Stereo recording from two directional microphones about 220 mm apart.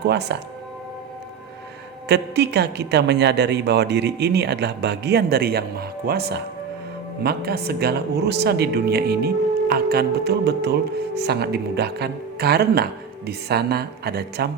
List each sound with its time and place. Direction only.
0.0 s speech: 50° right (ahead or behind)
2.0 s speech: 50° right (ahead or behind)